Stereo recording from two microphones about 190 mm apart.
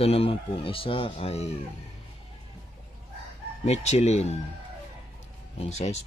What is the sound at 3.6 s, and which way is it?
Speech, 35° left (ahead or behind).